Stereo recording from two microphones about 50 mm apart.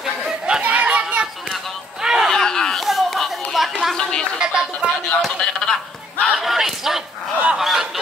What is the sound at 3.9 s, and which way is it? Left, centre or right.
Speech, centre.